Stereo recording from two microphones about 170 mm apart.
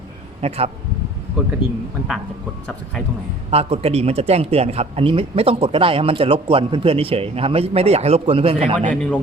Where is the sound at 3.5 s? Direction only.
35° right (ahead or behind).